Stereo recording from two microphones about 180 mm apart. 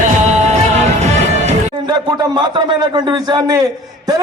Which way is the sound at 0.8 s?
40° right (ahead or behind).